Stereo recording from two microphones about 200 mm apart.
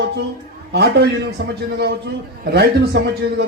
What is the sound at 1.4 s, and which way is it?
A man's voice, 55° right (ahead or behind).